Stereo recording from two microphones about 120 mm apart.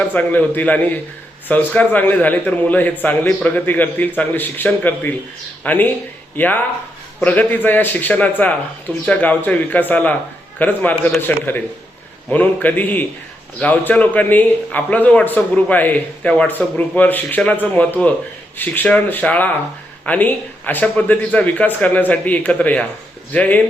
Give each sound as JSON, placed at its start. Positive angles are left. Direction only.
{"t": 0.1, "sound": "speech", "side_deg": 15}